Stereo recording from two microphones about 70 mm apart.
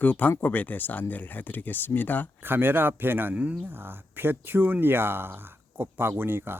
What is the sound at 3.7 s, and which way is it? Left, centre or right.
Speech, right.